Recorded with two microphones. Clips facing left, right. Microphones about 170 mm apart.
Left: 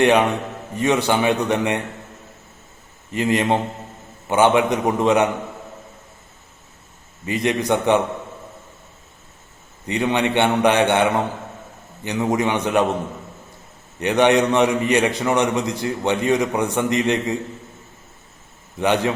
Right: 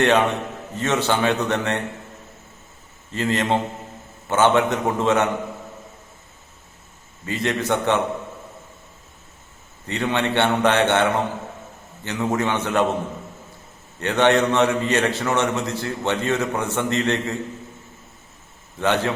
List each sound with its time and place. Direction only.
0.0 s a man's voice: 15° left (ahead or behind)
3.1 s a man's voice: 15° left (ahead or behind)
7.3 s a man's voice: 15° left (ahead or behind)
9.8 s a man's voice: 15° left (ahead or behind)
14.0 s a man's voice: 15° left (ahead or behind)
18.8 s a man's voice: 15° left (ahead or behind)